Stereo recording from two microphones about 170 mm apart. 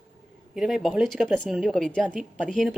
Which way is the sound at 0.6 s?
Centre (ahead or behind).